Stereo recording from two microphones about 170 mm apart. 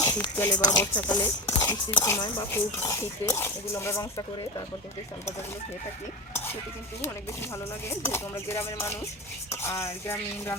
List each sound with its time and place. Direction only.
0.0 s speech: 15° left (ahead or behind)
7.9 s speech: 15° left (ahead or behind)